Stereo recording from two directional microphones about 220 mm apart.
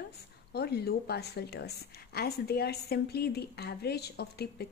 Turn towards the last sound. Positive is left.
turn(degrees=45)  # may be behind; listen again after turning